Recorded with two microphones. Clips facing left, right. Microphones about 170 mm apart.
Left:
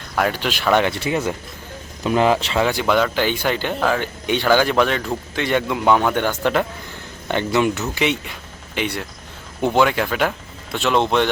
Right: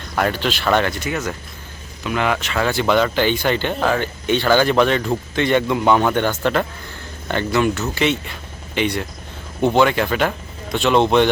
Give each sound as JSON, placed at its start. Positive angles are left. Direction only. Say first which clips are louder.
{"t": 0.2, "sound": "speech", "louder": "right 1 dB", "side_deg": 10}
{"t": 0.9, "sound": "speech", "louder": "left 2 dB", "side_deg": 30}
{"t": 2.6, "sound": "speech", "louder": "left 1 dB", "side_deg": 15}
{"t": 2.8, "sound": "speech", "louder": "right 1 dB", "side_deg": 5}
{"t": 4.0, "sound": "speech", "louder": "right 1 dB", "side_deg": 10}